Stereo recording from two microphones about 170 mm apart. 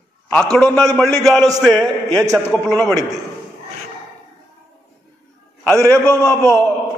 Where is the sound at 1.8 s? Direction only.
20° right (ahead or behind).